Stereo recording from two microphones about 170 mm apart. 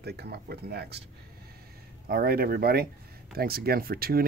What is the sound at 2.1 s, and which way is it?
Speech, 65° right (ahead or behind).